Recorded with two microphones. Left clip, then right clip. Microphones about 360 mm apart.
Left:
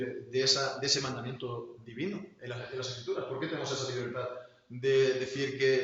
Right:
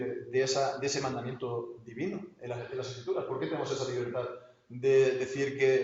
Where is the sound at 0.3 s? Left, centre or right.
Centre.